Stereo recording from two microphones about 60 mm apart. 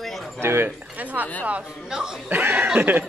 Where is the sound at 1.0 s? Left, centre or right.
Right.